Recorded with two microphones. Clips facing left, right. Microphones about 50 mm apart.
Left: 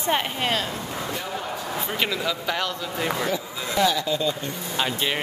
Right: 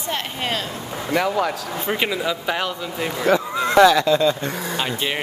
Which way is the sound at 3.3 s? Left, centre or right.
Right.